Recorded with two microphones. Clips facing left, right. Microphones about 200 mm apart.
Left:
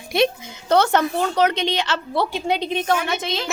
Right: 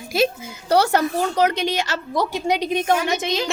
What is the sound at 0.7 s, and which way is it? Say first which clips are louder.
A woman's voice: even; 10° right (ahead or behind).